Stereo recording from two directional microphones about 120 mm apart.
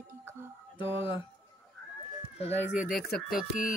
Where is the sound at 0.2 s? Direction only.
20° right (ahead or behind).